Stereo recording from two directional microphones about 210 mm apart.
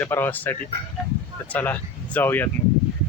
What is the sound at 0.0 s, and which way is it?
Speech, 10° left (ahead or behind).